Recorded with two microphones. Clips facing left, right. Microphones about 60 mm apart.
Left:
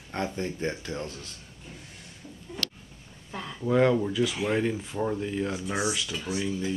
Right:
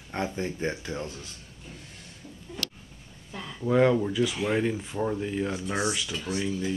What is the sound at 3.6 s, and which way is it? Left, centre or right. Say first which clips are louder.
Speech: right 1 dB; centre.